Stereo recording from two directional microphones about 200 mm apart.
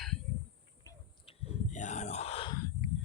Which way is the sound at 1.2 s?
30° left (ahead or behind).